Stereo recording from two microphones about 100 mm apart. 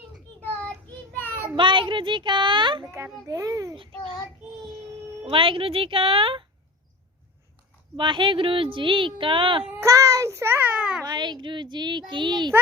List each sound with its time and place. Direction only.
1.1 s child singing: 20° left (ahead or behind)
1.5 s speech: 55° right (ahead or behind)
3.2 s a child's voice: 35° right (ahead or behind)
5.2 s speech: 60° right (ahead or behind)
7.9 s speech: 55° right (ahead or behind)
9.8 s a child's voice: 30° right (ahead or behind)
11.0 s speech: 45° right (ahead or behind)